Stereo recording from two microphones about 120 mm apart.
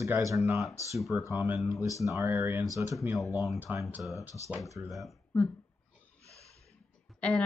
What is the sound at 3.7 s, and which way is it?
Speech, 15° right (ahead or behind).